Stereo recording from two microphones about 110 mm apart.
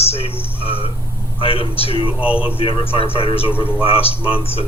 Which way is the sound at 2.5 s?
55° left (ahead or behind).